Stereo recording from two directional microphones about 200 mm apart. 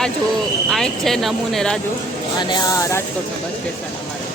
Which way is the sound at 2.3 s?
20° left (ahead or behind).